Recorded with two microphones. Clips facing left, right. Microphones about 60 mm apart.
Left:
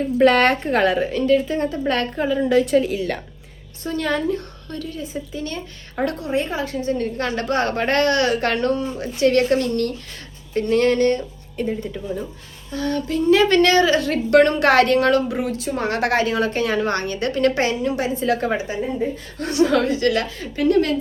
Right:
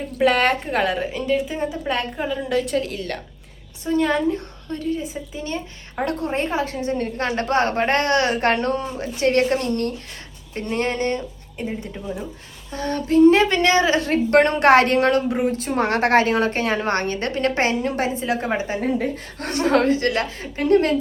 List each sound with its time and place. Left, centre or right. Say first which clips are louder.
0.2 s a woman's voice: left 2 dB; centre
3.8 s a woman's voice: right 2 dB; centre
6.1 s a woman's voice: right 1 dB; right; by 12.2 s centre
12.7 s a woman's voice: right 3 dB; right
13.5 s a woman's voice: left 2 dB; right
15.5 s a woman's voice: right 2 dB; right
18.1 s a woman's voice: left 2 dB; right
19.4 s a woman's voice: left 1 dB; right